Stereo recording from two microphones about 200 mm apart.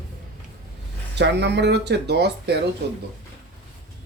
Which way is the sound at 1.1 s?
60° right (ahead or behind).